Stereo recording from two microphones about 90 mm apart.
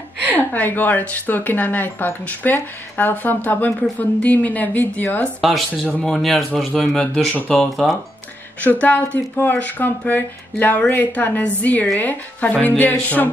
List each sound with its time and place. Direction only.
0.4 s speech: 20° left (ahead or behind)
5.4 s speech: centre (ahead or behind)
8.5 s speech: 15° left (ahead or behind)